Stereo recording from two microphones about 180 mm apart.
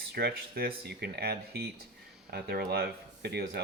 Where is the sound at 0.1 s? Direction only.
65° right (ahead or behind).